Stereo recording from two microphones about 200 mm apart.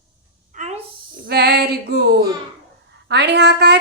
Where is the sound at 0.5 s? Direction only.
35° right (ahead or behind).